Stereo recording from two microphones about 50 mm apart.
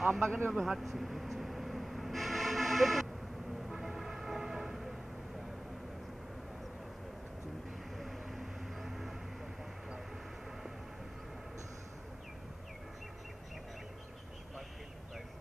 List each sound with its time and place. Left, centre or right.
0.0 s speech: centre
0.5 s vehicle: centre
3.6 s train: centre
8.0 s vehicle: centre